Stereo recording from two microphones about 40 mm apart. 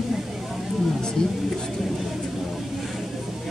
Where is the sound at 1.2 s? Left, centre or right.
Centre.